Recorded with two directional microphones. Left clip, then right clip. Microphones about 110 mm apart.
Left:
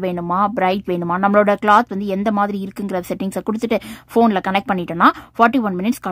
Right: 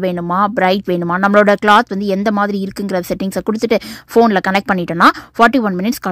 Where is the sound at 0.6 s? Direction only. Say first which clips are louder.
Right 4 dB; 20° right (ahead or behind).